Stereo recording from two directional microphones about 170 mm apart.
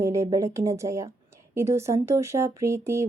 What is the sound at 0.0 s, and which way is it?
Speech, 15° right (ahead or behind).